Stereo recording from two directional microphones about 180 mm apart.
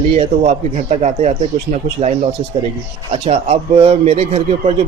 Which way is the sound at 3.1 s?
30° right (ahead or behind).